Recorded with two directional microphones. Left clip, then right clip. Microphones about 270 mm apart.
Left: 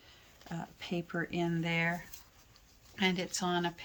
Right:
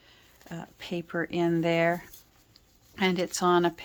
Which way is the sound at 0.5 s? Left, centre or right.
Centre.